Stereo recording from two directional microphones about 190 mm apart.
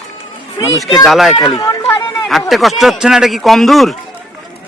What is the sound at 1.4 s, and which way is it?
Speech, 25° left (ahead or behind).